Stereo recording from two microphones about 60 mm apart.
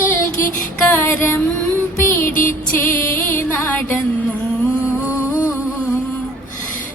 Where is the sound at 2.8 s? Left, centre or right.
Left.